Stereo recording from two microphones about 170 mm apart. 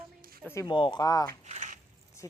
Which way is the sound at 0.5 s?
25° left (ahead or behind).